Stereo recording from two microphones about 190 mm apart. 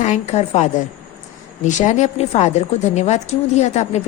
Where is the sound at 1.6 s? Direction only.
40° left (ahead or behind).